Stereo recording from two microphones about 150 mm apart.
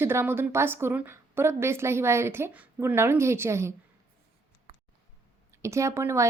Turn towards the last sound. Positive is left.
turn(degrees=-20)  # may be behind; listen again after turning